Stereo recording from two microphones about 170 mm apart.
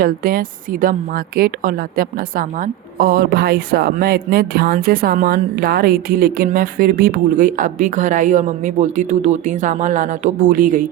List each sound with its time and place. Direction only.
0.0 s a woman's voice: 60° right (ahead or behind)